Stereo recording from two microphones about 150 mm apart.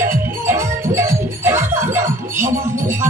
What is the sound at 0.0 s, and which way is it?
Music, 15° right (ahead or behind).